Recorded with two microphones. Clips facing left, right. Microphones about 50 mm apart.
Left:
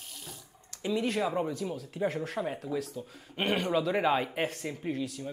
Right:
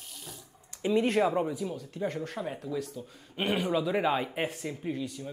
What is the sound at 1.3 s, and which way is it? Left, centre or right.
Speech, centre.